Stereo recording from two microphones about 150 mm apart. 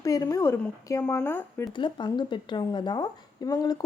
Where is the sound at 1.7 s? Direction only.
30° left (ahead or behind).